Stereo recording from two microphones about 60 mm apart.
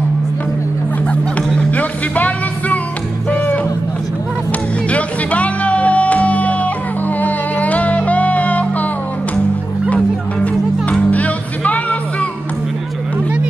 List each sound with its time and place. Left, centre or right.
1.7 s music: left
4.8 s music: left
10.4 s music: left